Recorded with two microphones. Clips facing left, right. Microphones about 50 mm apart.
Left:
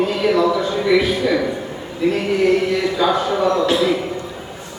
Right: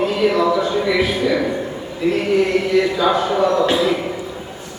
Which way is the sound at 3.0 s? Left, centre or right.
Centre.